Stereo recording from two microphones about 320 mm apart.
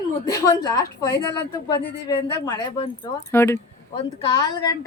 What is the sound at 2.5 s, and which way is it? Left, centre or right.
Speech, centre.